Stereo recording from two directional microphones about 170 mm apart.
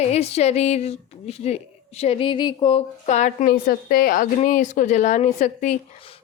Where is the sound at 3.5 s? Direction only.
60° left (ahead or behind); by 5.7 s 45° left (ahead or behind).